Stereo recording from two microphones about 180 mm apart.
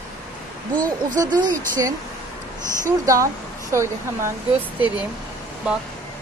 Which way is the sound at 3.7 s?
15° right (ahead or behind).